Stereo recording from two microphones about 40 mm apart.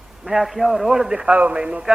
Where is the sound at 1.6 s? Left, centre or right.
Right.